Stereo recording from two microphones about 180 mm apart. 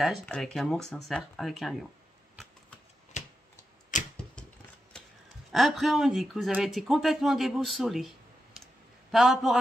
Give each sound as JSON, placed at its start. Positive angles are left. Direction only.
{"t": 0.0, "sound": "speech", "side_deg": 0}
{"t": 3.1, "sound": "a sound", "side_deg": 40}
{"t": 3.9, "sound": "typewriter", "side_deg": 45}
{"t": 4.9, "sound": "a sound", "side_deg": 5}
{"t": 5.5, "sound": "speech", "side_deg": 0}
{"t": 9.1, "sound": "speech", "side_deg": 0}